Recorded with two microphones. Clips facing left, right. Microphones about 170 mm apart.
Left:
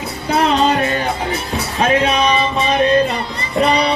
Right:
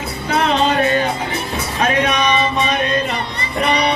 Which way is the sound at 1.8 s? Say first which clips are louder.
Left 2 dB; 30° left (ahead or behind).